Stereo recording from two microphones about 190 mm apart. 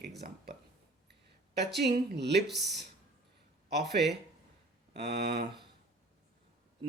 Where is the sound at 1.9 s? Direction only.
60° right (ahead or behind).